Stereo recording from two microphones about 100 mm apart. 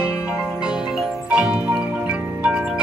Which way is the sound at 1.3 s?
10° right (ahead or behind).